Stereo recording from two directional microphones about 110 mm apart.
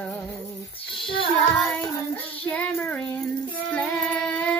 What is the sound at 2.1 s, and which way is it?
Speech, 15° left (ahead or behind).